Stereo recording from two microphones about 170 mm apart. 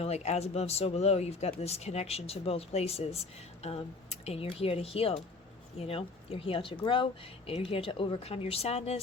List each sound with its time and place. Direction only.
0.0 s speech: 40° left (ahead or behind)